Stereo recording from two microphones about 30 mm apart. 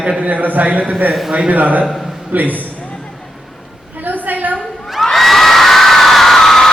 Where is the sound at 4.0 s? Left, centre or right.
Right.